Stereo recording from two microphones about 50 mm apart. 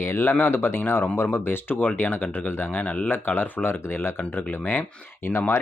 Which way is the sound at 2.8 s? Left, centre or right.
Left.